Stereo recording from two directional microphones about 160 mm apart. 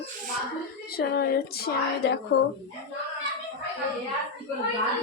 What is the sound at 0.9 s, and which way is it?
A woman's voice, 75° left (ahead or behind).